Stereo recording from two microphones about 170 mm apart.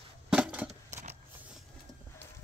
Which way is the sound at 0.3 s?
5° right (ahead or behind).